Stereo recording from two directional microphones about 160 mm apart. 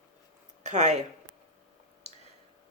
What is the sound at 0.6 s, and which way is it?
Speech, 45° right (ahead or behind).